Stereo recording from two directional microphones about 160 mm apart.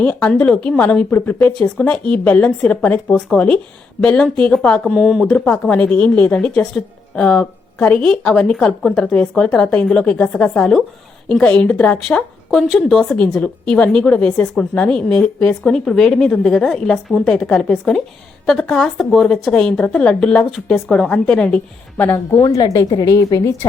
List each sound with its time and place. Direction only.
0.0 s speech: 5° left (ahead or behind)
22.3 s a woman's voice: 25° left (ahead or behind)